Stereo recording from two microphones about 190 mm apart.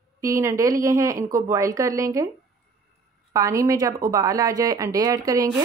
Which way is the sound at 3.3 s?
15° right (ahead or behind).